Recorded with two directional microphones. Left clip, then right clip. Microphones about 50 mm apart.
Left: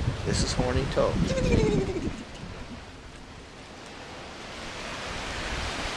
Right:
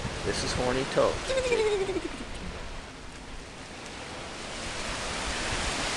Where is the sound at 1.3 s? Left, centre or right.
Centre.